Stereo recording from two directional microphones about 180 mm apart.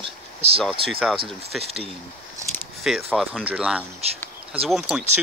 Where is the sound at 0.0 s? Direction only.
35° right (ahead or behind).